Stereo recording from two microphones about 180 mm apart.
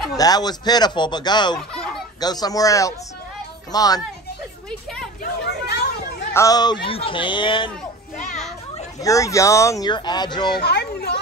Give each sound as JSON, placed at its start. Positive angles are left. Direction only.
{"t": 0.2, "sound": "speech", "side_deg": 20}
{"t": 1.7, "sound": "a sound", "side_deg": 5}
{"t": 2.1, "sound": "speech", "side_deg": 20}
{"t": 5.2, "sound": "chatter", "side_deg": 65}
{"t": 6.3, "sound": "speech", "side_deg": 20}
{"t": 9.0, "sound": "speech", "side_deg": 15}
{"t": 10.6, "sound": "speech", "side_deg": 65}